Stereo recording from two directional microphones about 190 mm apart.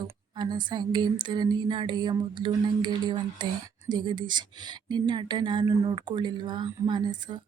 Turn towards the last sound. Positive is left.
turn(degrees=-25)  # may be behind; listen again after turning